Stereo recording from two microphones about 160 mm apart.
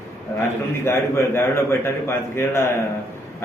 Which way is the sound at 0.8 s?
15° left (ahead or behind).